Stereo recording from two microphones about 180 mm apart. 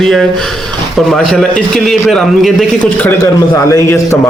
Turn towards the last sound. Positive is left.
turn(degrees=15)  # may be behind; listen again after turning